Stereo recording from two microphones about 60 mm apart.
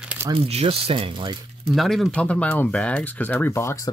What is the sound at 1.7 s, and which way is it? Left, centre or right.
Speech, centre.